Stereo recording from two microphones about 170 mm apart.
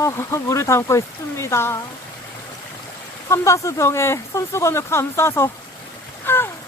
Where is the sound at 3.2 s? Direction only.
15° left (ahead or behind).